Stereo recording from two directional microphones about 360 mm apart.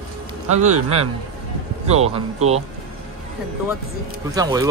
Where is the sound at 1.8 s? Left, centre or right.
Centre.